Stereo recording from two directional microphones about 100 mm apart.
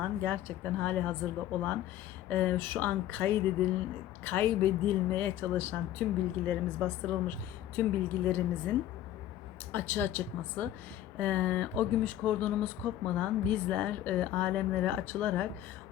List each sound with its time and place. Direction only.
0.0 s speech: 15° left (ahead or behind)
9.7 s speech: 20° left (ahead or behind)